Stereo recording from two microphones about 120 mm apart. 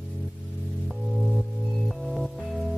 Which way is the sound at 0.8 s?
Centre (ahead or behind).